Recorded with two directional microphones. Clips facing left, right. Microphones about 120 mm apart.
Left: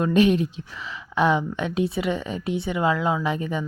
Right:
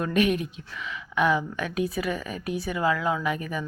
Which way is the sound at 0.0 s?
30° left (ahead or behind).